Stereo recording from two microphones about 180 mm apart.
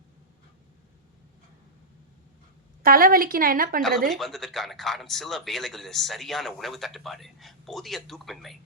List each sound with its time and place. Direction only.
2.8 s a woman's voice: 55° right (ahead or behind)
4.1 s speech: centre (ahead or behind)